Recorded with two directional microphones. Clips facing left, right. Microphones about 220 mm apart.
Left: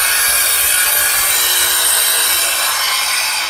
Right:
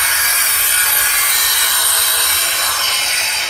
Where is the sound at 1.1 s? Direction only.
25° left (ahead or behind).